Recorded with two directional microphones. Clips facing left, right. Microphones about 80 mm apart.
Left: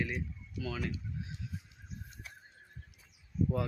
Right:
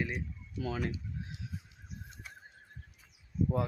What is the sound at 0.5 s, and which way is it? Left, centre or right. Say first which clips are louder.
Speech: right 3 dB; right.